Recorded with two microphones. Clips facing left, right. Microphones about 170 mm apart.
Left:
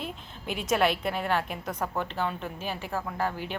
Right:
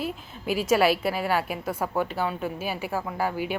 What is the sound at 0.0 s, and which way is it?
A woman's voice, 5° right (ahead or behind).